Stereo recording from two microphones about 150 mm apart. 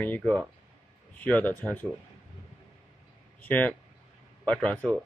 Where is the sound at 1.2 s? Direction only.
10° left (ahead or behind).